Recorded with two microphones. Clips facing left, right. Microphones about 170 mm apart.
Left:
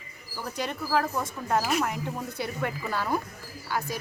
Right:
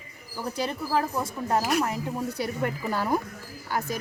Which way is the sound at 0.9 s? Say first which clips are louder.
Left 1 dB; 15° right (ahead or behind).